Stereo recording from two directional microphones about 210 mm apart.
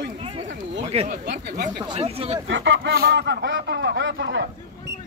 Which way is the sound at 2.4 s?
60° right (ahead or behind).